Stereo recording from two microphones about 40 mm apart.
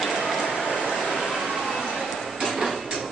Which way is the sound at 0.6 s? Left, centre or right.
Centre.